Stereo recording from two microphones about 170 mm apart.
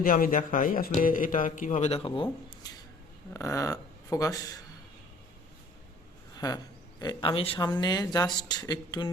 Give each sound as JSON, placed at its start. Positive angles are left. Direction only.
{"t": 0.0, "sound": "a man's voice", "side_deg": 55}
{"t": 3.3, "sound": "speech", "side_deg": 20}
{"t": 6.3, "sound": "a sound", "side_deg": 20}
{"t": 7.0, "sound": "speech", "side_deg": 30}